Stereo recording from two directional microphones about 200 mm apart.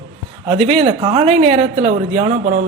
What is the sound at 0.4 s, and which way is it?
Speech, 30° right (ahead or behind).